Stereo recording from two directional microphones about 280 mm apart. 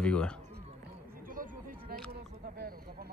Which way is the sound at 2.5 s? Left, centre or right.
Right.